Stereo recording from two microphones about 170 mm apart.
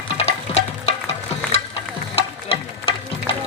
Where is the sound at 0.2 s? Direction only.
40° left (ahead or behind).